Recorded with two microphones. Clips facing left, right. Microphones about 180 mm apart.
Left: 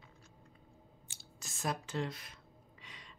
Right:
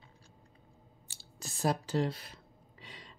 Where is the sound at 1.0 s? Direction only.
35° right (ahead or behind).